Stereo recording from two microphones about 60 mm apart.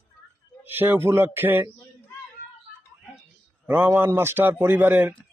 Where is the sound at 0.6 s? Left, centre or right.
Right.